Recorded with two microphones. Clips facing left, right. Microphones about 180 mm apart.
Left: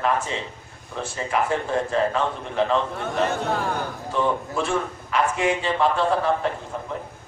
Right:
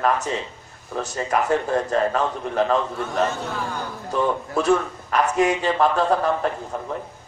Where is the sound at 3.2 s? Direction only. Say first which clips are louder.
Left 3 dB; 60° left (ahead or behind).